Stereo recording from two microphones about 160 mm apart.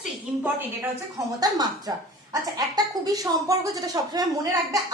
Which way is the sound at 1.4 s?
25° right (ahead or behind).